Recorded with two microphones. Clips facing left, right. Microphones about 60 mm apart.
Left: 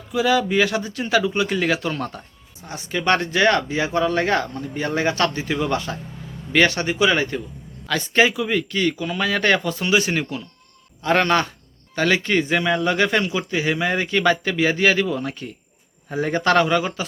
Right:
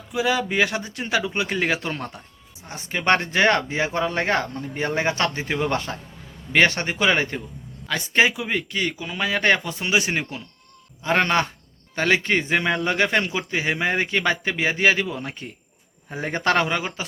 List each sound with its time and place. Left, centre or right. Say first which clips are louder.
0.1 s speech: left 4 dB; right
7.9 s speech: left 2 dB; centre